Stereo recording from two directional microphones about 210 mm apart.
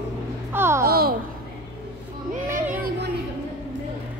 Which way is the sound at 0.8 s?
45° right (ahead or behind).